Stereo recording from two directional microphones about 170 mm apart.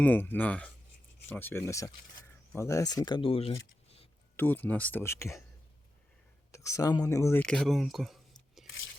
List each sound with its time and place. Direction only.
0.0 s speech: 10° left (ahead or behind); by 4.1 s 35° left (ahead or behind)
4.4 s speech: 10° left (ahead or behind)
6.5 s speech: 20° left (ahead or behind)
7.4 s speech: centre (ahead or behind)